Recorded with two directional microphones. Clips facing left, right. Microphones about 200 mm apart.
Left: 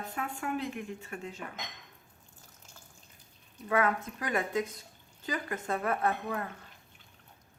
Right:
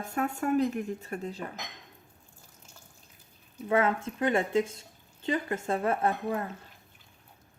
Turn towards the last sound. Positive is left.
turn(degrees=-25)  # may be behind; listen again after turning